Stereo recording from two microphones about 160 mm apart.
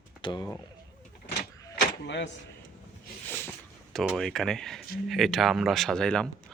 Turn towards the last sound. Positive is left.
turn(degrees=5)  # may be behind; listen again after turning